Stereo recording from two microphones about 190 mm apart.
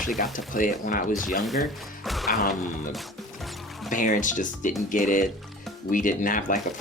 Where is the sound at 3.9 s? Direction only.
45° left (ahead or behind).